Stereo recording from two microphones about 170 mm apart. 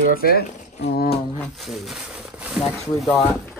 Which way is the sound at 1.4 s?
Centre (ahead or behind).